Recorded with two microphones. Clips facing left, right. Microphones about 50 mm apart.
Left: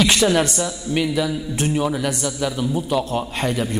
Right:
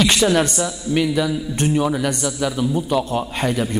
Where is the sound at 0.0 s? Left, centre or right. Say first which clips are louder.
Right 1 dB; centre.